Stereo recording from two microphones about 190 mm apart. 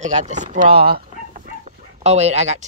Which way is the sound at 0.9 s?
45° right (ahead or behind).